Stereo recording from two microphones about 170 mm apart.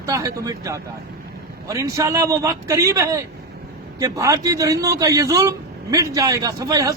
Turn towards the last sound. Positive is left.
turn(degrees=-20)  # may be behind; listen again after turning